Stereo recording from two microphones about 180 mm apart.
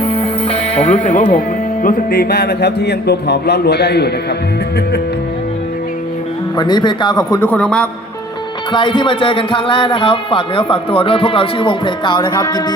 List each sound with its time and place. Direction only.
0.0 s music: 35° left (ahead or behind)
1.8 s speech: 55° left (ahead or behind)
6.6 s speech: 25° left (ahead or behind); by 7.9 s 5° left (ahead or behind)
8.7 s speech: 25° left (ahead or behind)